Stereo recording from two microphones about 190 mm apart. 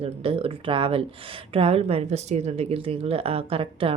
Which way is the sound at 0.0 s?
30° right (ahead or behind).